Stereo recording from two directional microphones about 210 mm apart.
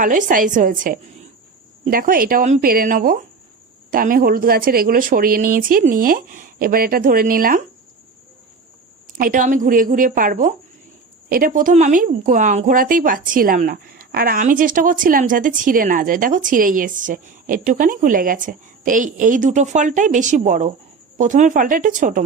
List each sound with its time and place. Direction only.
0.0 s speech: 40° right (ahead or behind)
9.1 s speech: 40° right (ahead or behind)